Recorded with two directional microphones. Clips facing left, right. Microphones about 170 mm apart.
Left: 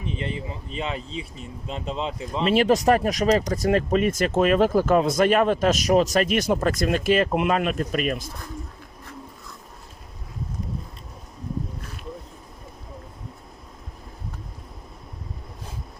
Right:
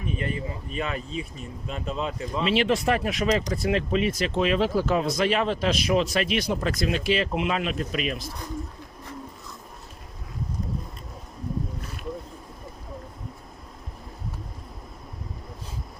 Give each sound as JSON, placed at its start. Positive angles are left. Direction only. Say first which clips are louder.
{"t": 0.0, "sound": "speech", "louder": "even", "side_deg": 25}
{"t": 2.4, "sound": "speech", "louder": "left 4 dB", "side_deg": 45}